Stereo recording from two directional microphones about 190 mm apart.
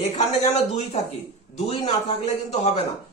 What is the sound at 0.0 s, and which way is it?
A man's voice, 35° left (ahead or behind).